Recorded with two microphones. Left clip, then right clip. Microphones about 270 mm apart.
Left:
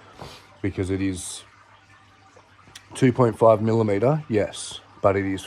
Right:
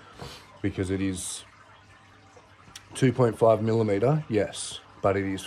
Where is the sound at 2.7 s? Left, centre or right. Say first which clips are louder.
Left 4 dB; centre.